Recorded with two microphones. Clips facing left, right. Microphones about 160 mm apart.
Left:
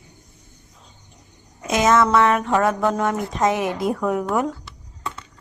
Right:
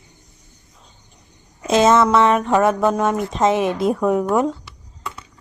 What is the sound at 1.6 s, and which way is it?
Music, 25° right (ahead or behind).